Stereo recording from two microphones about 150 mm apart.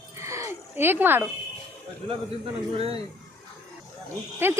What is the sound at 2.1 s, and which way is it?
Speech, 40° right (ahead or behind).